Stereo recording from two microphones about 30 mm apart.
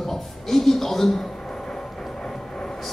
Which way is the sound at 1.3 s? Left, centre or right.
Left.